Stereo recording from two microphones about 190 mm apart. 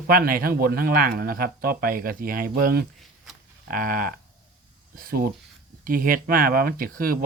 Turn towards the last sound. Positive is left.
turn(degrees=-50)  # may be behind; listen again after turning